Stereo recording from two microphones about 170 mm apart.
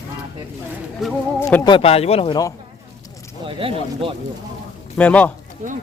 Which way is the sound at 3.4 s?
30° right (ahead or behind).